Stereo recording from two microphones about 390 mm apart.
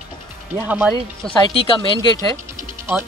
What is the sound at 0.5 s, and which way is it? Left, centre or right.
Speech, centre.